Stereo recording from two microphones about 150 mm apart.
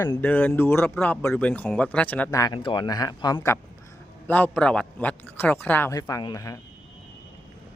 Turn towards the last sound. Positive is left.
turn(degrees=25)  # may be behind; listen again after turning